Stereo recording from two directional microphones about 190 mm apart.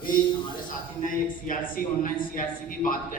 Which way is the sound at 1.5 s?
45° left (ahead or behind).